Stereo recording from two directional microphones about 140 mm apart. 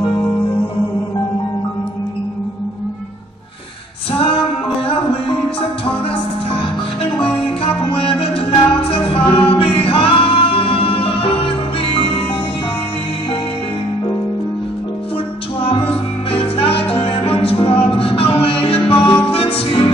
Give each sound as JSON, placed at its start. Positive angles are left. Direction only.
{"t": 7.9, "sound": "music", "side_deg": 40}
{"t": 16.3, "sound": "music", "side_deg": 45}